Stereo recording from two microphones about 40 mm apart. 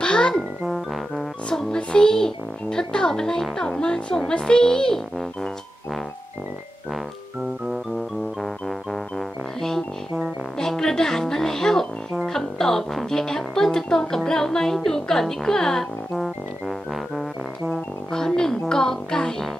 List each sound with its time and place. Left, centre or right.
0.0 s music: left
0.3 s a child's voice: centre
1.8 s speech: left
8.4 s music: centre
9.1 s music: centre
12.3 s speech: centre
16.6 s music: centre
17.6 s speech: centre